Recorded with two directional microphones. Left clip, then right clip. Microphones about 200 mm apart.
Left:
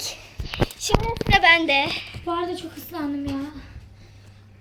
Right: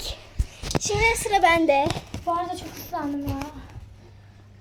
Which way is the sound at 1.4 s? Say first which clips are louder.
Left 2 dB; 5° right (ahead or behind).